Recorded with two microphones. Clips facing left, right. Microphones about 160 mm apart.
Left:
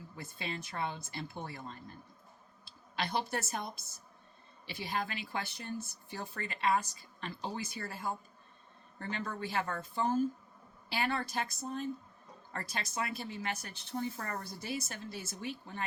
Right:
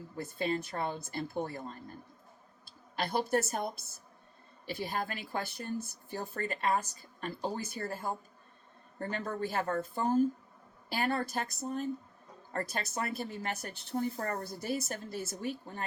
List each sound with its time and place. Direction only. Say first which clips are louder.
0.3 s speech: right 6 dB; 45° right (ahead or behind)
2.9 s speech: right 5 dB; 45° right (ahead or behind)